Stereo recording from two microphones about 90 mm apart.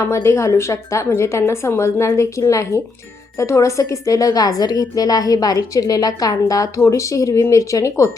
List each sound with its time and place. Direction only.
0.1 s a woman's voice: 30° left (ahead or behind)